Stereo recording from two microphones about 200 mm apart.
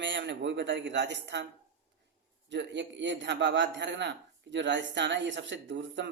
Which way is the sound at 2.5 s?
60° right (ahead or behind).